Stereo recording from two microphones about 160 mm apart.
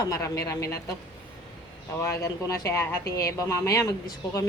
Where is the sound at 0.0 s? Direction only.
20° left (ahead or behind).